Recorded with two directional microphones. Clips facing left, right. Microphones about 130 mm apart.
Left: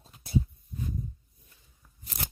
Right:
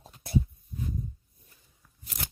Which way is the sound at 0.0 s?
65° right (ahead or behind).